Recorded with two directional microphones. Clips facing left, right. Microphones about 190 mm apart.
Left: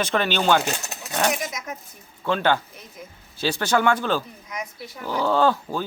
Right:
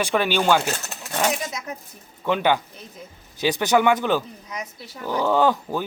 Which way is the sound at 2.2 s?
15° right (ahead or behind).